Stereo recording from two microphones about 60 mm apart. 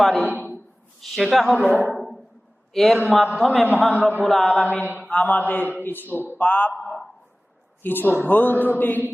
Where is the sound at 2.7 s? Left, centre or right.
Centre.